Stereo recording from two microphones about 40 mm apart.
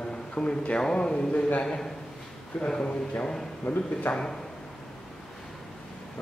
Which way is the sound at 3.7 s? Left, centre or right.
Left.